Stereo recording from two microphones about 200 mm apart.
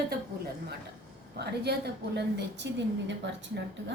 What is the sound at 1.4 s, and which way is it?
A woman's voice, 55° right (ahead or behind).